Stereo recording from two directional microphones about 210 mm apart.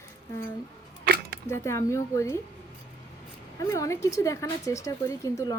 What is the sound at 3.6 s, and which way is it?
A woman's voice, 15° left (ahead or behind).